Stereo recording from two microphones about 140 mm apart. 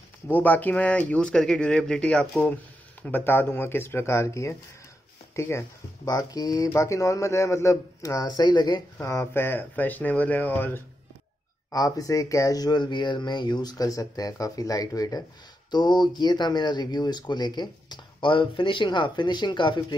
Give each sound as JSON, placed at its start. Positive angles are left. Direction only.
{"t": 0.3, "sound": "speech", "side_deg": 10}
{"t": 8.9, "sound": "speech", "side_deg": 20}
{"t": 11.7, "sound": "speech", "side_deg": 25}